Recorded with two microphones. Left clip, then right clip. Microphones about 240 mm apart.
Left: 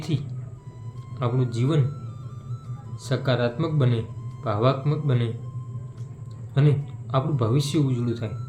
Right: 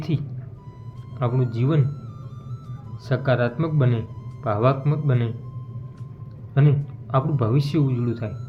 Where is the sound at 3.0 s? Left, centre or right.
Centre.